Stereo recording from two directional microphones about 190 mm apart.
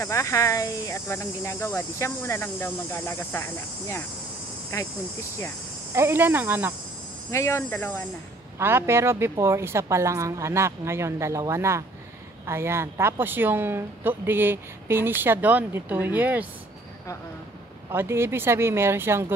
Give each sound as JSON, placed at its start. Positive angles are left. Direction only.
{"t": 0.0, "sound": "speech", "side_deg": 15}
{"t": 5.9, "sound": "speech", "side_deg": -10}
{"t": 7.2, "sound": "speech", "side_deg": 15}
{"t": 8.5, "sound": "speech", "side_deg": -15}
{"t": 17.9, "sound": "speech", "side_deg": -15}